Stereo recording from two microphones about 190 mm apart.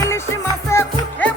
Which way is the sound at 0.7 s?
15° left (ahead or behind).